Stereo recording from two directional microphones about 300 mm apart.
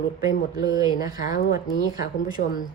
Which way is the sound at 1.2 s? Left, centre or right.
Left.